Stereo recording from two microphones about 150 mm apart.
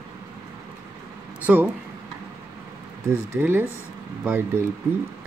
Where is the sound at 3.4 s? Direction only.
15° right (ahead or behind).